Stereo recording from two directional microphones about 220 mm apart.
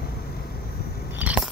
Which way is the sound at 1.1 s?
5° right (ahead or behind).